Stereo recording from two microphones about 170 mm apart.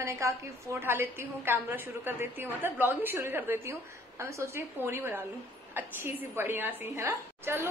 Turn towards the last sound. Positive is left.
turn(degrees=-15)  # may be behind; listen again after turning